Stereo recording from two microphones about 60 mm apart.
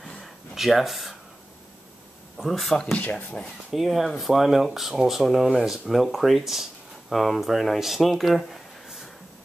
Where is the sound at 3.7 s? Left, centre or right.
Centre.